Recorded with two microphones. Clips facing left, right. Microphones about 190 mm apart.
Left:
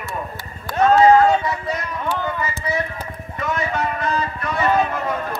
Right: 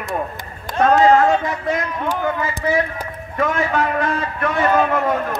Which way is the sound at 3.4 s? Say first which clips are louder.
Right 4 dB; 55° right (ahead or behind).